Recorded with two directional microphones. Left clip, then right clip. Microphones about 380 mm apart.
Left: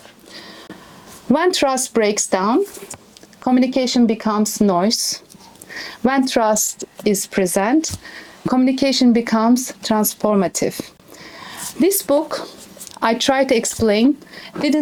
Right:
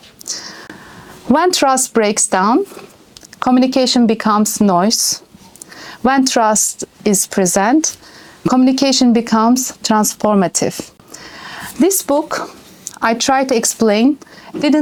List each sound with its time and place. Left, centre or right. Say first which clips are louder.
1.3 s a woman's voice: right 4 dB; right